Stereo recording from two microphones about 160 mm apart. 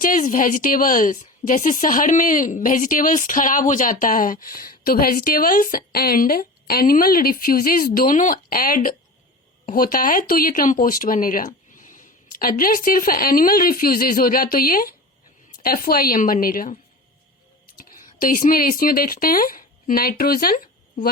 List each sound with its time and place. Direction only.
0.0 s a woman's voice: 55° left (ahead or behind)
17.7 s speech: 60° left (ahead or behind)